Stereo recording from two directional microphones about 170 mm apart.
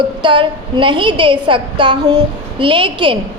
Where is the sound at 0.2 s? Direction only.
30° right (ahead or behind).